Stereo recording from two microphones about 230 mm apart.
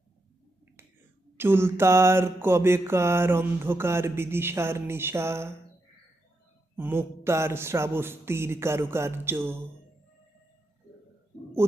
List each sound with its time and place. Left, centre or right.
1.4 s mantra: centre
6.7 s mantra: centre